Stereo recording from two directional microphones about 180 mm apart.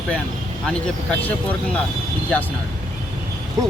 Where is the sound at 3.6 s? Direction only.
20° right (ahead or behind).